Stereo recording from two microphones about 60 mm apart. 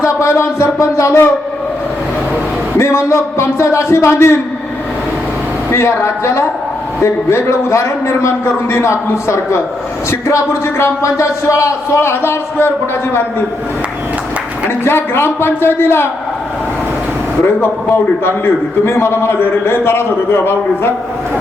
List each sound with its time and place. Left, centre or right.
0.0 s speech: left
2.7 s speech: left
5.7 s speech: left
14.8 s speech: left
17.6 s a man's voice: left